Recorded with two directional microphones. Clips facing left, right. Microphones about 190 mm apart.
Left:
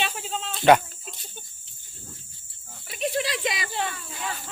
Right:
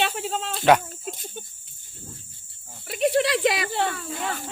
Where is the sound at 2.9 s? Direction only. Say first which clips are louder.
Right 6 dB; 60° right (ahead or behind).